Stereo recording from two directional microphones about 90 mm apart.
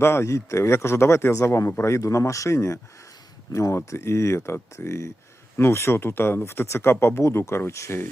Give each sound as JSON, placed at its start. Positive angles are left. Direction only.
{"t": 0.0, "sound": "a man's voice", "side_deg": 30}